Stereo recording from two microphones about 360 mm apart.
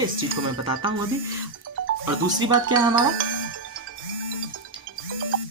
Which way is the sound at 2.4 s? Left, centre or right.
Centre.